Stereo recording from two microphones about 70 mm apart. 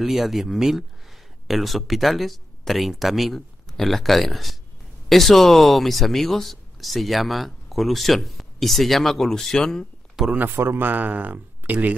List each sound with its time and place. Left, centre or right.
0.0 s speech: centre
10.2 s speech: centre
10.5 s speech: right